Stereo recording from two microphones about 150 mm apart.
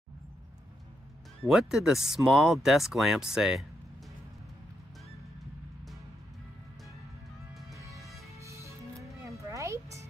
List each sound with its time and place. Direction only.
1.5 s speech: centre (ahead or behind)
7.7 s music: 20° right (ahead or behind)